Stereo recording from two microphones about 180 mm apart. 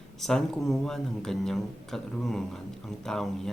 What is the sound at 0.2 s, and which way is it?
Speech, 5° left (ahead or behind).